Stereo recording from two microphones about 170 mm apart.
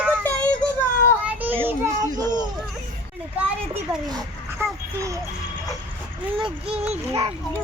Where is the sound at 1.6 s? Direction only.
20° right (ahead or behind).